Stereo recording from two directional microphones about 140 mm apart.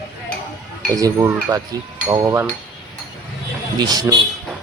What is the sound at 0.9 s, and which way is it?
Speech, 25° right (ahead or behind).